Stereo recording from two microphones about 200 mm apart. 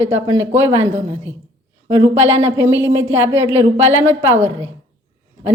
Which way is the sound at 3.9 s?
80° right.